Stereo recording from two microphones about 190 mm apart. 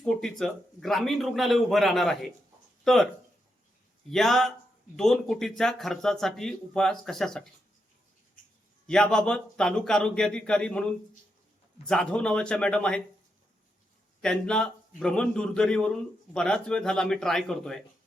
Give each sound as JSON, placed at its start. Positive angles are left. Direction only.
{"t": 0.0, "sound": "a man's voice", "side_deg": 0}
{"t": 4.1, "sound": "a man's voice", "side_deg": 0}
{"t": 8.9, "sound": "a man's voice", "side_deg": 5}
{"t": 11.9, "sound": "a man's voice", "side_deg": 5}
{"t": 14.2, "sound": "a man's voice", "side_deg": 5}